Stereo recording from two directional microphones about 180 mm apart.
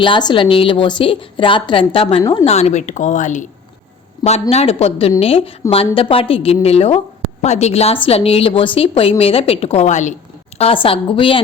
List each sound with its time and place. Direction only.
0.0 s a woman's voice: 25° left (ahead or behind); by 10.2 s 40° left (ahead or behind)
10.6 s a woman's voice: 30° left (ahead or behind)